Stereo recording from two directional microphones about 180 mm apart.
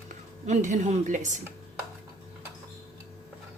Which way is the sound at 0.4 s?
45° right (ahead or behind).